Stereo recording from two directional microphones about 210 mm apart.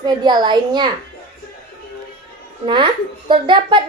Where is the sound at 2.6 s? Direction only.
25° right (ahead or behind).